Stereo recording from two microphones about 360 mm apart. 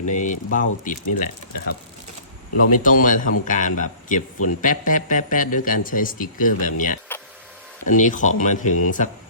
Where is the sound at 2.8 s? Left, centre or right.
Left.